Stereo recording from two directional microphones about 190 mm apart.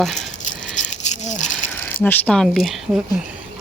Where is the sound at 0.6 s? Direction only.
40° left (ahead or behind).